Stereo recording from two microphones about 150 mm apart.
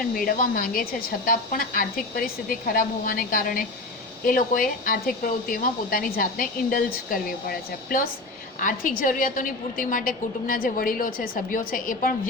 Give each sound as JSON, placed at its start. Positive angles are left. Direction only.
{"t": 0.1, "sound": "a woman's voice", "side_deg": 70}